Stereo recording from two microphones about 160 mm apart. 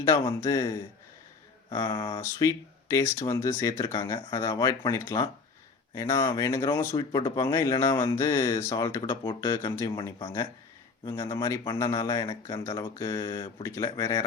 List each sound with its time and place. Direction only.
0.0 s speech: 20° left (ahead or behind)